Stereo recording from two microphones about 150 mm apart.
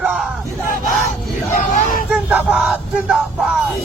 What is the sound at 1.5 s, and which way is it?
Vehicle, 65° left (ahead or behind).